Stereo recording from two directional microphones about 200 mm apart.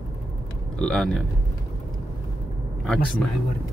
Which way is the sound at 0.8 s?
Centre (ahead or behind).